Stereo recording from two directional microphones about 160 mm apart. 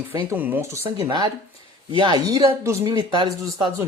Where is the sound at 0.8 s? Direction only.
30° right (ahead or behind).